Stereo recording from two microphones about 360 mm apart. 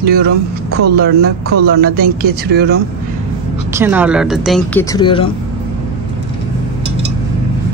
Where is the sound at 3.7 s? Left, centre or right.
Centre.